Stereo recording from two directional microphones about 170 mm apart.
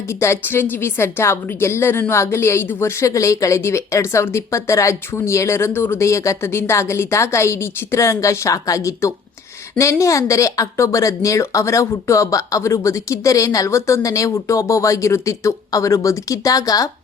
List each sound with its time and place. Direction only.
0.1 s a woman's voice: 15° left (ahead or behind)